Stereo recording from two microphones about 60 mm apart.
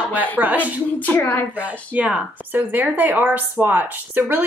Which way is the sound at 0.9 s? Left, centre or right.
Left.